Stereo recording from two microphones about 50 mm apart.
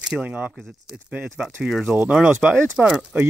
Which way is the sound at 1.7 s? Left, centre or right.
Centre.